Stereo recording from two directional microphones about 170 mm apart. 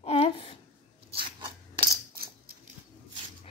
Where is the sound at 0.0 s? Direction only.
35° left (ahead or behind).